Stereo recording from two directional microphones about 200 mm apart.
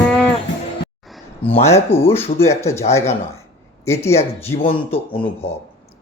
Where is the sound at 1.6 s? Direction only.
15° left (ahead or behind).